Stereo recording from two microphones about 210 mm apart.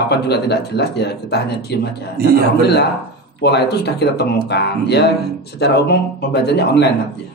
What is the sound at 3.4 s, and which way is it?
Speech, 50° left (ahead or behind).